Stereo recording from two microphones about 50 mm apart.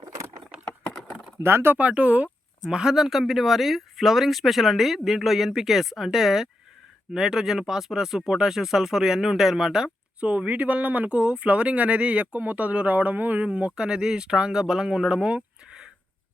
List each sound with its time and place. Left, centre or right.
0.7 s computer keyboard: left
1.4 s speech: right
1.8 s speech: right
2.6 s speech: centre
10.2 s speech: right
15.4 s a sound: centre